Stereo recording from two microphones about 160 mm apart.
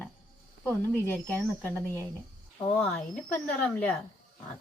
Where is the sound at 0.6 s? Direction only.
10° left (ahead or behind).